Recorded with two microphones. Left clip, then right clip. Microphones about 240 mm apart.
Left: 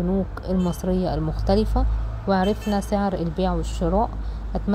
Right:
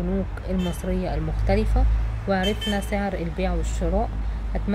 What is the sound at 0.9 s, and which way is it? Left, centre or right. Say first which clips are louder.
Speech: left 4 dB; left.